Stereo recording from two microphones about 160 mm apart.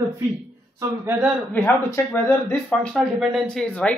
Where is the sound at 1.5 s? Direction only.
10° left (ahead or behind).